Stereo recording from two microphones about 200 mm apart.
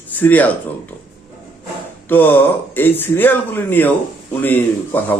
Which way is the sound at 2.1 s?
10° left (ahead or behind).